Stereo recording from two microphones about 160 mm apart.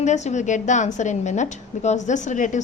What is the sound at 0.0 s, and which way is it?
A woman's voice, 45° left (ahead or behind).